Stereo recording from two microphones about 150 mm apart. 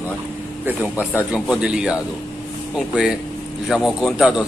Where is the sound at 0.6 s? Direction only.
10° right (ahead or behind).